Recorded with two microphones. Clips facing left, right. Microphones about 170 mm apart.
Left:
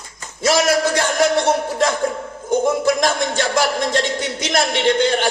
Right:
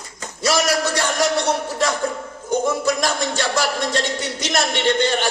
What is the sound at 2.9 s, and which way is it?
A man's voice, 50° left (ahead or behind).